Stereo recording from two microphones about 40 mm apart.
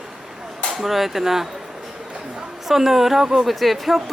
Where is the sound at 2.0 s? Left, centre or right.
Right.